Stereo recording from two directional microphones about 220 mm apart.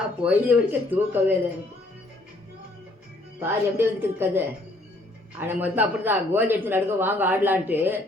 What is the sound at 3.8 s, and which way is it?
Speech, 10° right (ahead or behind).